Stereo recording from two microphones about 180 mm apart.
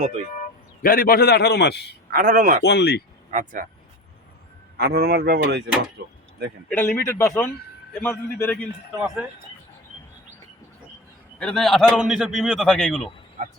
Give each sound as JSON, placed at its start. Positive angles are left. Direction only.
{"t": 0.8, "sound": "a man's voice", "side_deg": 55}
{"t": 2.0, "sound": "speech", "side_deg": -50}
{"t": 2.6, "sound": "speech", "side_deg": 70}
{"t": 3.3, "sound": "speech", "side_deg": -45}
{"t": 4.8, "sound": "speech", "side_deg": -60}
{"t": 6.7, "sound": "a man's voice", "side_deg": 10}
{"t": 9.0, "sound": "a man's voice", "side_deg": -5}
{"t": 11.3, "sound": "a man's voice", "side_deg": 5}